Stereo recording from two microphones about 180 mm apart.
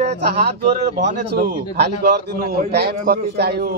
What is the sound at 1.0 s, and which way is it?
A man's voice, 65° right (ahead or behind).